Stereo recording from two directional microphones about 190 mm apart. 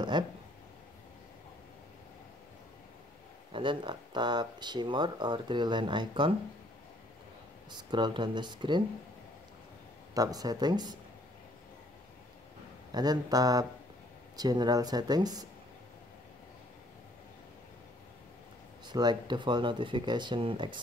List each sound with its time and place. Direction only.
0.1 s a sound: 25° right (ahead or behind)
3.5 s speech: 25° right (ahead or behind)
7.7 s speech: 25° right (ahead or behind)
10.1 s speech: 20° right (ahead or behind)
12.9 s speech: 20° right (ahead or behind)
18.9 s speech: 20° right (ahead or behind)